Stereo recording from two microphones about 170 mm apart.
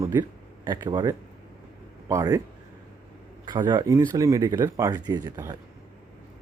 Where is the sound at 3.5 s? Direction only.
25° right (ahead or behind).